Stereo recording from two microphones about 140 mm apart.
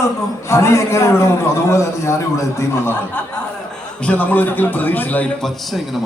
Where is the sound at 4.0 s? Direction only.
10° left (ahead or behind).